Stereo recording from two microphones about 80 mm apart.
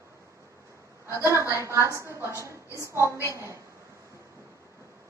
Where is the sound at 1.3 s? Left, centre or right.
Right.